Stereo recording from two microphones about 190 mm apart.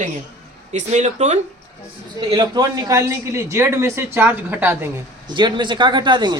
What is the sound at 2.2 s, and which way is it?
Speech, 20° right (ahead or behind).